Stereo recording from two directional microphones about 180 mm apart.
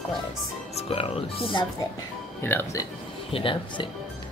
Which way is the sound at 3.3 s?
30° left (ahead or behind).